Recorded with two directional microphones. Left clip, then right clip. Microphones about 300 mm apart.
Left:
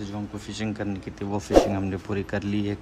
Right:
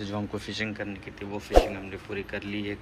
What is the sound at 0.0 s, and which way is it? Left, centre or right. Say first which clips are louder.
Speech: right 2 dB; centre.